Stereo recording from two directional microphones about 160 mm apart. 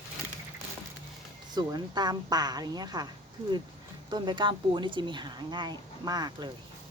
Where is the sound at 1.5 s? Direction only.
25° right (ahead or behind).